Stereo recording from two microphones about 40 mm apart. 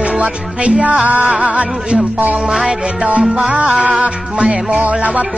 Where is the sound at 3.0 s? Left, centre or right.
Right.